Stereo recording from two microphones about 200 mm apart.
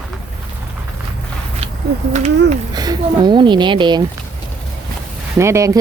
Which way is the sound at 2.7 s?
20° right (ahead or behind).